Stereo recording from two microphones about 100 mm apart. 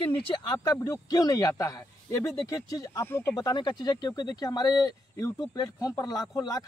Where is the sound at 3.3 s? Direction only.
45° left (ahead or behind).